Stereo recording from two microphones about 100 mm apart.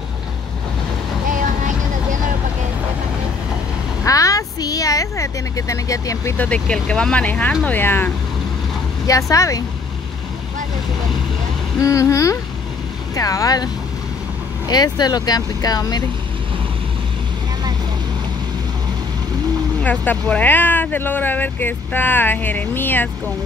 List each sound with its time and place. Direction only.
4.0 s vehicle: 35° left (ahead or behind)
6.3 s speech: 15° left (ahead or behind)
9.0 s speech: 35° left (ahead or behind)
11.8 s speech: 30° left (ahead or behind)
14.7 s speech: 45° left (ahead or behind)
19.8 s speech: 15° left (ahead or behind)